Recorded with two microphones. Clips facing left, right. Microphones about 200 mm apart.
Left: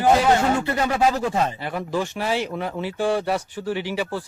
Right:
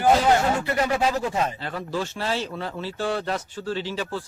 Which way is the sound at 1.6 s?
15° left (ahead or behind).